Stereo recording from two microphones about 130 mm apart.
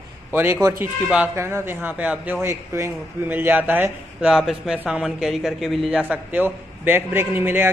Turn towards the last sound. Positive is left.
turn(degrees=-15)  # may be behind; listen again after turning